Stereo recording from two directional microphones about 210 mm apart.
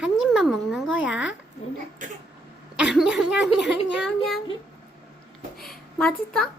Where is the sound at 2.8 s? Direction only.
5° right (ahead or behind).